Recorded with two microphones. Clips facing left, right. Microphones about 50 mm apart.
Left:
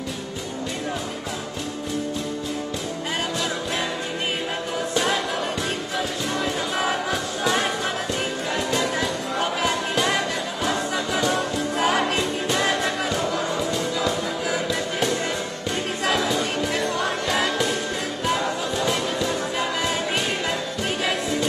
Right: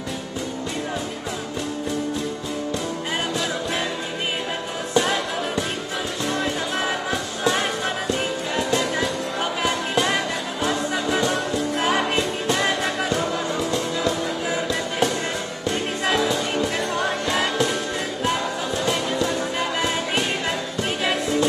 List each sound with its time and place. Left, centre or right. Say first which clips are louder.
4.9 s music: right 3 dB; centre
10.9 s music: right 1 dB; centre
11.7 s music: left 1 dB; centre
12.2 s music: right 1 dB; centre
16.1 s music: right 1 dB; centre